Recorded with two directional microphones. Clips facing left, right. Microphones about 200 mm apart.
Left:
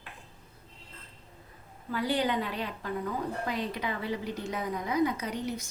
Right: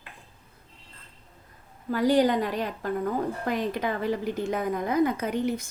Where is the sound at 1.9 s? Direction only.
45° right (ahead or behind).